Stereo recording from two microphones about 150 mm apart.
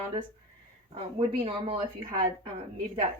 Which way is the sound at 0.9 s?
40° right (ahead or behind).